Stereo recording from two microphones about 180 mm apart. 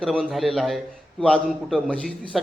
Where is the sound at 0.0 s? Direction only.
Centre (ahead or behind).